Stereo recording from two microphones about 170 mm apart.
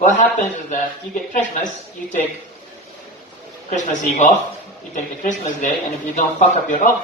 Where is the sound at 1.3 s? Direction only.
50° left (ahead or behind).